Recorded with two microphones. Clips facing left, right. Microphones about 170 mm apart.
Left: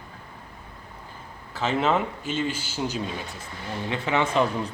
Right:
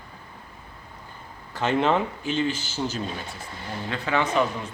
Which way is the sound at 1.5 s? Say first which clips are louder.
Right 1 dB; 5° left (ahead or behind).